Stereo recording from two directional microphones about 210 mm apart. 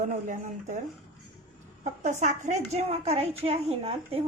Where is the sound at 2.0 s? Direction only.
35° right (ahead or behind).